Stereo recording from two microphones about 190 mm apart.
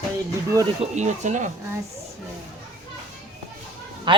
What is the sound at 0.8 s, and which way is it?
Speech, 40° right (ahead or behind).